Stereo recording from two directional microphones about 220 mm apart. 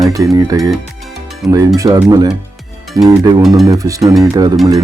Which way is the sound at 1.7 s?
15° right (ahead or behind).